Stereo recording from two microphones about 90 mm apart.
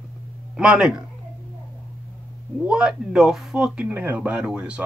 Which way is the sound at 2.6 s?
10° right (ahead or behind).